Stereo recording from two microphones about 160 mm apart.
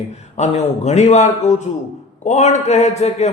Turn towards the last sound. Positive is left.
turn(degrees=45)  # may be behind; listen again after turning